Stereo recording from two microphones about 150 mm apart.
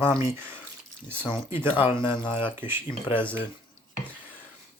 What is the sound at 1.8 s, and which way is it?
Speech, 35° left (ahead or behind).